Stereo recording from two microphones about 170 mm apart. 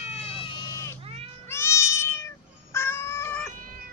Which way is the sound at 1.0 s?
35° right (ahead or behind).